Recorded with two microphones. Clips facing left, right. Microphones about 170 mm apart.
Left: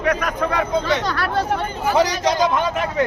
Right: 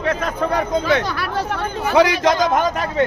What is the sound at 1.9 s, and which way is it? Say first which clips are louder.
Speech: right 3 dB; 60° right (ahead or behind).